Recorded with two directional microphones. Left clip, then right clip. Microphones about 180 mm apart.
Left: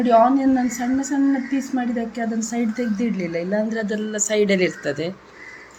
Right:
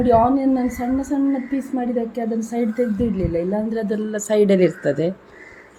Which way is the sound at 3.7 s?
30° right (ahead or behind).